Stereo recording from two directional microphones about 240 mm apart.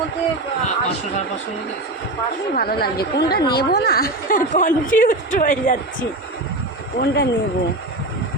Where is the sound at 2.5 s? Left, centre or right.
Left.